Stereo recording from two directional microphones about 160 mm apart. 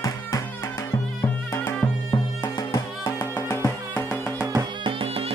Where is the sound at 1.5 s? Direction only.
20° left (ahead or behind).